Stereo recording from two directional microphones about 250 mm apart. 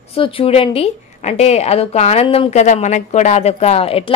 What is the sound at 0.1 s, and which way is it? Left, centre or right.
A woman's voice, left.